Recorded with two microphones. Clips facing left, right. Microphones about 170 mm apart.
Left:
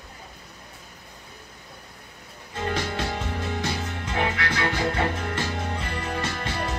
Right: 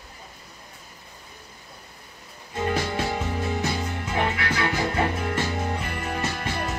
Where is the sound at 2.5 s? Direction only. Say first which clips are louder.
Right 2 dB; 10° right (ahead or behind).